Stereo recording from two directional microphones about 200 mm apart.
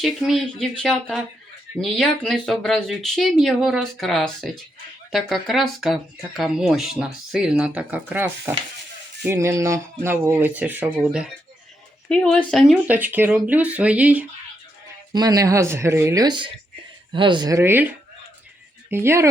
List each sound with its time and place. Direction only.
0.0 s speech: centre (ahead or behind)
12.0 s speech: 5° left (ahead or behind)
15.1 s speech: 20° right (ahead or behind)
18.9 s speech: 10° right (ahead or behind)